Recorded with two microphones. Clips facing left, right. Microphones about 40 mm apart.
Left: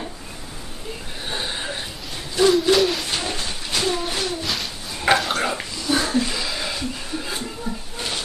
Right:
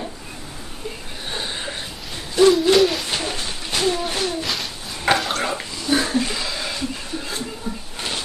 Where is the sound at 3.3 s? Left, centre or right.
Centre.